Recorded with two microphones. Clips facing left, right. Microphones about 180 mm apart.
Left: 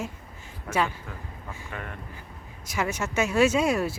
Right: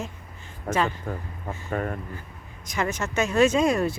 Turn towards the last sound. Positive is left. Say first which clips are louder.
# right 2 dB
turn(degrees=5)  # may be behind; listen again after turning